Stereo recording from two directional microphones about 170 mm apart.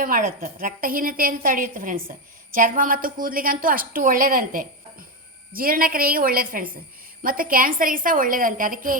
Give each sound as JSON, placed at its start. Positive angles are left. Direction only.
{"t": 0.0, "sound": "a woman's voice", "side_deg": -55}